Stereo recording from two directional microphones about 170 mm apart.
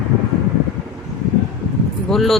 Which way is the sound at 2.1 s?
Centre (ahead or behind).